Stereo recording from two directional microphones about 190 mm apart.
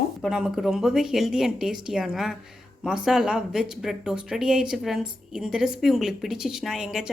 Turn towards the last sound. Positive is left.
turn(degrees=-5)  # may be behind; listen again after turning